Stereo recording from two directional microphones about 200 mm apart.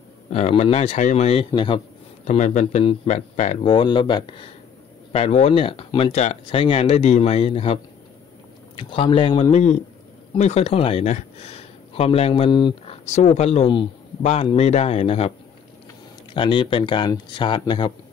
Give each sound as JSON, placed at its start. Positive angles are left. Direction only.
{"t": 0.3, "sound": "speech", "side_deg": 35}
{"t": 2.2, "sound": "speech", "side_deg": 35}
{"t": 16.3, "sound": "speech", "side_deg": 25}